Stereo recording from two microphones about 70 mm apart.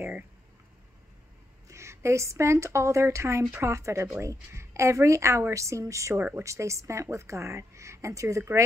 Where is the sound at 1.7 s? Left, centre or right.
Right.